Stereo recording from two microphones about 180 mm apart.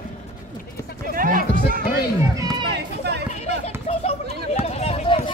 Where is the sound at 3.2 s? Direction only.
35° left (ahead or behind).